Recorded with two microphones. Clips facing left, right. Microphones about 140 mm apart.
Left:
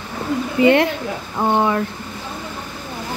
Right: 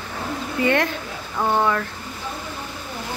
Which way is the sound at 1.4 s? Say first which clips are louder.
Left 3 dB; 20° left (ahead or behind).